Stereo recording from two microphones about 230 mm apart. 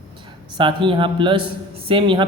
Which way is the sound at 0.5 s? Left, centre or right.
Right.